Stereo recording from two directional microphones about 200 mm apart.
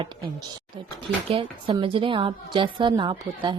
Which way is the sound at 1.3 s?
25° right (ahead or behind).